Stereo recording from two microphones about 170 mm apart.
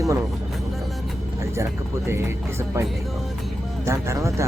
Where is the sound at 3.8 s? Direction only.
15° right (ahead or behind).